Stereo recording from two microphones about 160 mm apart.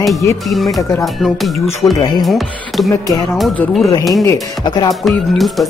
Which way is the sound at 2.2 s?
Centre (ahead or behind).